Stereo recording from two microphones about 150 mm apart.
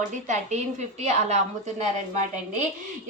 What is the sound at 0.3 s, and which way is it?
A woman's voice, 50° right (ahead or behind).